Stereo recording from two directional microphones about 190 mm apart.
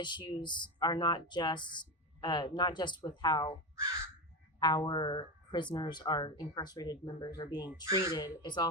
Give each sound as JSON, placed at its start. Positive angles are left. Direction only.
{"t": 0.0, "sound": "speech", "side_deg": 25}
{"t": 4.6, "sound": "speech", "side_deg": 20}